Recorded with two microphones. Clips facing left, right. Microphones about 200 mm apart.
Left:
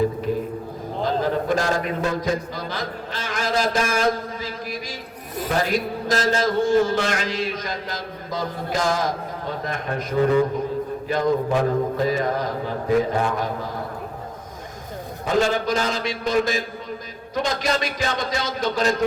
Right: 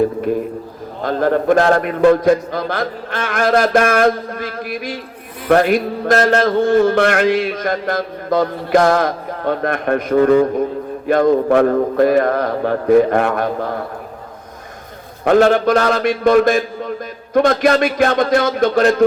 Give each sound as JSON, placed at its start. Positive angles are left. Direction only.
{"t": 1.0, "sound": "a man's voice", "side_deg": -55}
{"t": 15.2, "sound": "a man's voice", "side_deg": -65}